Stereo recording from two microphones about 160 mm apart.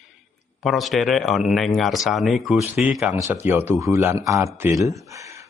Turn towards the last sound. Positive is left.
turn(degrees=-20)  # may be behind; listen again after turning